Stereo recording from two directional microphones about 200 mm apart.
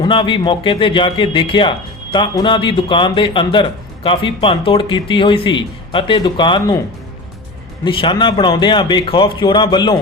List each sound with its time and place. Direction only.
0.0 s a man's voice: 25° left (ahead or behind)
7.9 s a man's voice: 25° left (ahead or behind)